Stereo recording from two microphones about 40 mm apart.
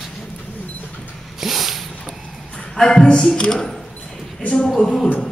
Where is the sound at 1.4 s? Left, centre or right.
Centre.